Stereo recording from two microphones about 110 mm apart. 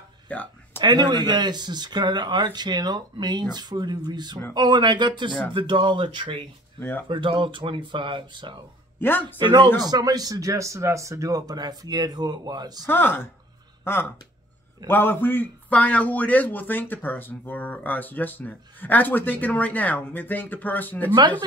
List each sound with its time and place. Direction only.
0.3 s a man's voice: 15° left (ahead or behind)
0.7 s speech: 40° right (ahead or behind)
6.8 s a man's voice: 20° left (ahead or behind)
7.1 s speech: 50° right (ahead or behind)
12.8 s a man's voice: 20° left (ahead or behind)